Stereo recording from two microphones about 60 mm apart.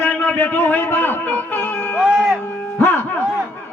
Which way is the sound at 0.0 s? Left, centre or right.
Left.